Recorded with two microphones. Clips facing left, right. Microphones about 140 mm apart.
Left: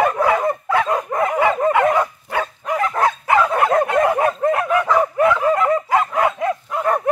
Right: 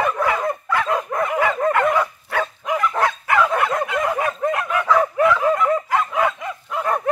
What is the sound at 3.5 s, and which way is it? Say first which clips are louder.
Bow-wow: left 5 dB; 45° left (ahead or behind).